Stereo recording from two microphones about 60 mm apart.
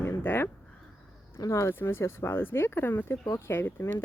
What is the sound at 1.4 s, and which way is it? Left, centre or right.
Speech, left.